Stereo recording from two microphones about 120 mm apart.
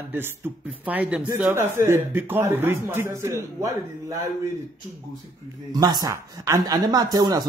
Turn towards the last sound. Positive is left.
turn(degrees=-30)  # may be behind; listen again after turning